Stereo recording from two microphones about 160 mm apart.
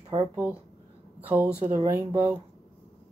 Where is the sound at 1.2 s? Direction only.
10° right (ahead or behind).